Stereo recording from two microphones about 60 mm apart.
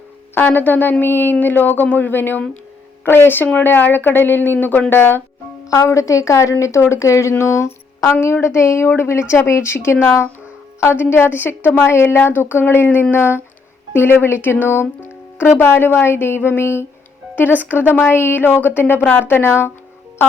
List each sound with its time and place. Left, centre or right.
0.3 s speech: left
5.7 s a woman's voice: left
8.1 s speech: left
10.9 s speech: left